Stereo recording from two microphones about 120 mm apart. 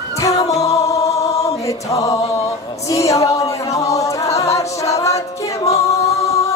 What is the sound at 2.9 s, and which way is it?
A capella, 25° left (ahead or behind).